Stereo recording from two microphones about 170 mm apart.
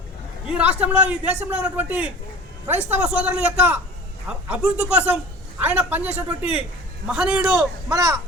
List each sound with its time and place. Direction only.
0.4 s a man's voice: 5° right (ahead or behind)
7.9 s a child's voice: 20° right (ahead or behind)